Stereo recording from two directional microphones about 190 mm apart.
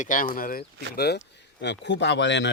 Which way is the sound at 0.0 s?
45° left (ahead or behind).